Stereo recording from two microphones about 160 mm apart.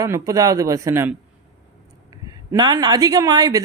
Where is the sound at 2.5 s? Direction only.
25° right (ahead or behind).